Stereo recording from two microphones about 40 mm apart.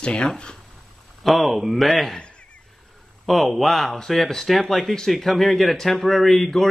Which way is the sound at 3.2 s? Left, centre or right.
Centre.